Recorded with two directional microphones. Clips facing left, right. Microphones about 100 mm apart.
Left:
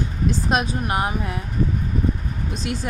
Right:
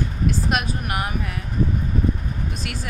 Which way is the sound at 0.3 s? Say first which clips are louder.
Left 2 dB; 25° left (ahead or behind).